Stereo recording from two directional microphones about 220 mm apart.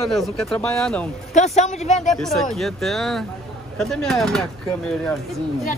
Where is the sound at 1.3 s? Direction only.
30° left (ahead or behind).